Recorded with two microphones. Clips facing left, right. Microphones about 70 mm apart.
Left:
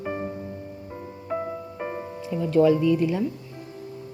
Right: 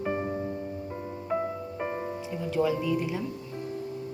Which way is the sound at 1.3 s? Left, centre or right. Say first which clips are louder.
Left 1 dB; centre.